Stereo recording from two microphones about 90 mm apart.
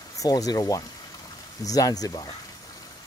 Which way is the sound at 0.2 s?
45° left (ahead or behind).